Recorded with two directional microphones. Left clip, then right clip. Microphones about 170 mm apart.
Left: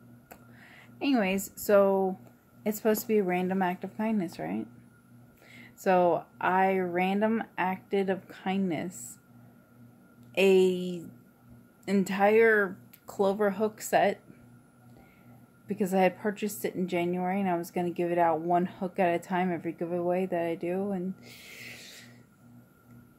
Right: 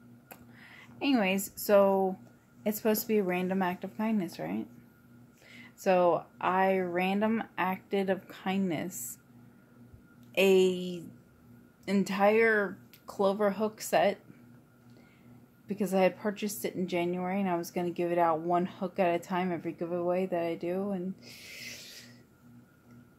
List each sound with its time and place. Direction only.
0.3 s a sound: 10° left (ahead or behind)
2.6 s a woman's voice: 15° left (ahead or behind)
10.3 s a woman's voice: 15° left (ahead or behind)
15.6 s a woman's voice: 20° left (ahead or behind)